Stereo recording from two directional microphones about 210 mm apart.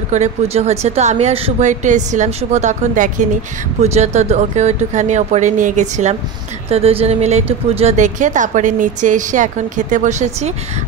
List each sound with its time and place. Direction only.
0.1 s speech: 30° right (ahead or behind)